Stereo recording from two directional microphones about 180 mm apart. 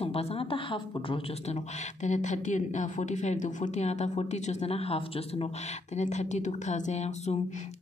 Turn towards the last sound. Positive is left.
turn(degrees=40)  # may be behind; listen again after turning